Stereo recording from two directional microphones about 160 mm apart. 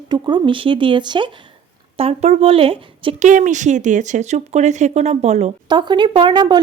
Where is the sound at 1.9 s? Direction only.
40° right (ahead or behind).